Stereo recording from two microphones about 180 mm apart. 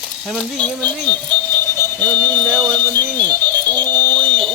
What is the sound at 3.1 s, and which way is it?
Music, 10° left (ahead or behind).